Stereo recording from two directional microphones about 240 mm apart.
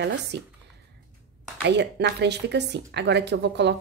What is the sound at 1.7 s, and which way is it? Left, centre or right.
A woman's voice, right.